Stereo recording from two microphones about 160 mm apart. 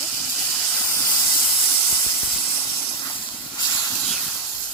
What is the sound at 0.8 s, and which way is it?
Steam, 15° left (ahead or behind).